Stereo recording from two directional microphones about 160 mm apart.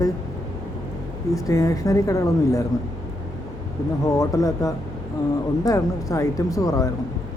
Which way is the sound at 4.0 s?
20° left (ahead or behind).